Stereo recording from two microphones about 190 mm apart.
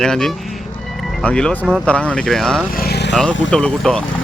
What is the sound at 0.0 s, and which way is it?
Speech, 5° left (ahead or behind).